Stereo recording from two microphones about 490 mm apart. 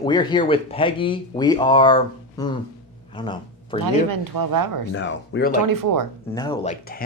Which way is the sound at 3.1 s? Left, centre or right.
Centre.